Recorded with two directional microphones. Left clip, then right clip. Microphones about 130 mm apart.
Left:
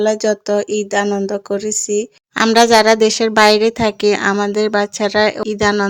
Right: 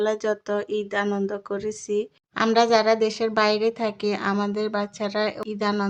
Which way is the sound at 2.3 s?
65° left (ahead or behind).